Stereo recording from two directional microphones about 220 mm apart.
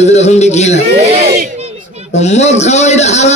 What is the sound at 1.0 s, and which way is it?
Speech, 30° right (ahead or behind).